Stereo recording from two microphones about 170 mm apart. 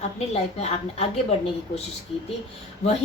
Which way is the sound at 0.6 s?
40° left (ahead or behind).